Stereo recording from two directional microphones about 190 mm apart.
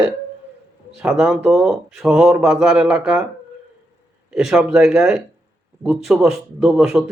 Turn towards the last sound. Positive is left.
turn(degrees=-5)  # may be behind; listen again after turning